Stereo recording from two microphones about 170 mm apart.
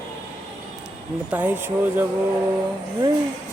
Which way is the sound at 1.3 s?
10° right (ahead or behind).